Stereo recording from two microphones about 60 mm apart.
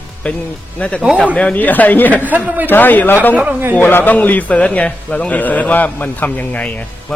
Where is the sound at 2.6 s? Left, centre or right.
Left.